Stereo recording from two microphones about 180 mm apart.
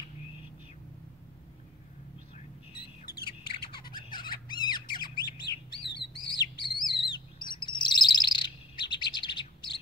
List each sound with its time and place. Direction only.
3.1 s bird: 60° left (ahead or behind)
3.7 s squawk: 25° left (ahead or behind)
5.8 s bird: 25° left (ahead or behind)